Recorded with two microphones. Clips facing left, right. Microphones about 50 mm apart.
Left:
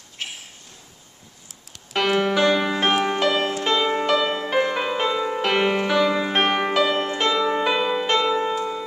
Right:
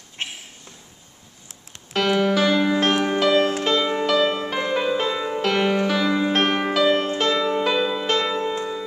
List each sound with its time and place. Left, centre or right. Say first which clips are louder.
0.2 s a sound: right 2 dB; right
2.0 s music: even; centre
7.8 s music: left 1 dB; left
8.1 s music: left 2 dB; centre